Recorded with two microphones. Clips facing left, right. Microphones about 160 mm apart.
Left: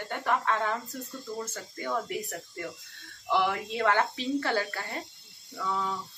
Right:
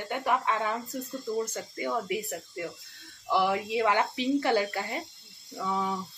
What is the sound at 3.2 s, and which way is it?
Speech, 15° right (ahead or behind).